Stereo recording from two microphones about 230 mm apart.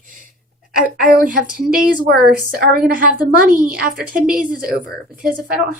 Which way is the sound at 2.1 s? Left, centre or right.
Right.